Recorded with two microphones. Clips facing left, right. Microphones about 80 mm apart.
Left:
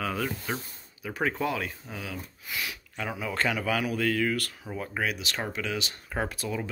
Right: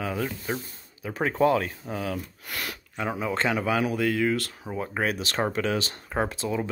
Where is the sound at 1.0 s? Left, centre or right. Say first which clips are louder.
Right 6 dB; right.